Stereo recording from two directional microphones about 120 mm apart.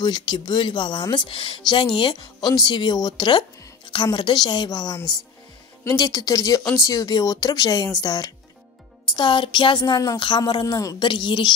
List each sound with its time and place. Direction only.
0.0 s speech: 35° left (ahead or behind)
11.1 s speech: 40° left (ahead or behind)